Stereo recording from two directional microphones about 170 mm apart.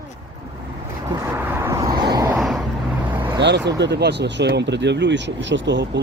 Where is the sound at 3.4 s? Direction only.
90° right.